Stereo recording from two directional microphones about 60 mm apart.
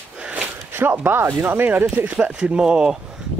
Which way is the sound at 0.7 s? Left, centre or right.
Right.